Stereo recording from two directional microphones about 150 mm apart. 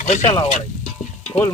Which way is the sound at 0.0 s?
50° left (ahead or behind).